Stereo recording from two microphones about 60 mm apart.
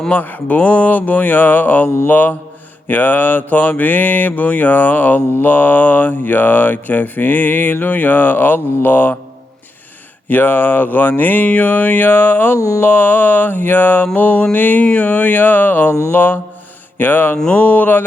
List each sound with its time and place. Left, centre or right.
0.1 s mantra: left
5.4 s speech: left
10.2 s speech: left
14.1 s mantra: left
16.1 s speech: left
17.3 s a sound: centre
17.6 s mantra: left